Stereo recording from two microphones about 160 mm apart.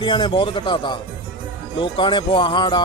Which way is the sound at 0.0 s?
30° left (ahead or behind).